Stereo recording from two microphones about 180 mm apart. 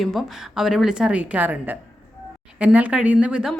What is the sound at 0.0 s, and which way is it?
Speech, centre (ahead or behind).